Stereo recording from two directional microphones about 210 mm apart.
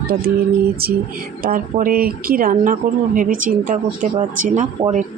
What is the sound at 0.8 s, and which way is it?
Speech, 45° right (ahead or behind).